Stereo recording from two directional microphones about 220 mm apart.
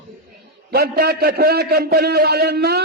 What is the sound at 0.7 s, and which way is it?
A man's voice, 45° right (ahead or behind).